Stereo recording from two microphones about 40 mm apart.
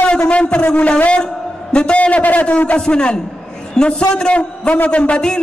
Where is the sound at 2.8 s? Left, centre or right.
Left.